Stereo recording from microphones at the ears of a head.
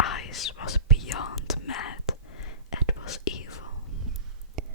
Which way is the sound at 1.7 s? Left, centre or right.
Left.